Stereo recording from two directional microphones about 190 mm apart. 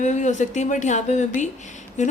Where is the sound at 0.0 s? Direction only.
40° left (ahead or behind).